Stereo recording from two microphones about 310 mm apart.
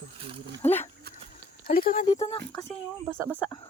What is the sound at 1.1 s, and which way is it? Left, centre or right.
Dog, right.